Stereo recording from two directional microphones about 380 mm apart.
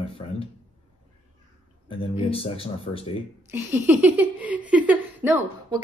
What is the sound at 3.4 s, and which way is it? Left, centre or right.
Speech, centre.